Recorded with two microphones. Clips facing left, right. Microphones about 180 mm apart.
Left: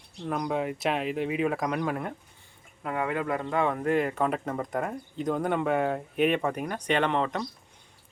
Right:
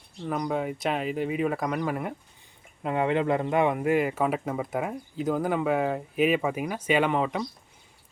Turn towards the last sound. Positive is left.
turn(degrees=-5)  # may be behind; listen again after turning